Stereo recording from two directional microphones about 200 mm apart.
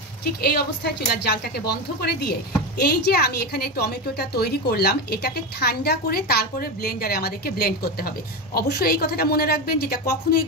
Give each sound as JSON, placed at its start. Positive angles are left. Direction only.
{"t": 0.2, "sound": "a woman's voice", "side_deg": 50}